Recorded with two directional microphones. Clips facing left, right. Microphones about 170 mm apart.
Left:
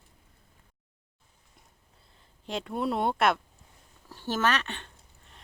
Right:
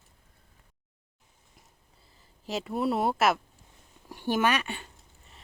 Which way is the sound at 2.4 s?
5° right (ahead or behind).